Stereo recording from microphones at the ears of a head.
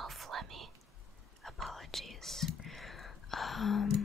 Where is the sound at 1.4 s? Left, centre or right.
Centre.